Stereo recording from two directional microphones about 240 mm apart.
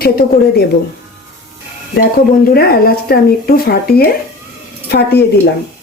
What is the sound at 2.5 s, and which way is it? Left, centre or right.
Speech, left.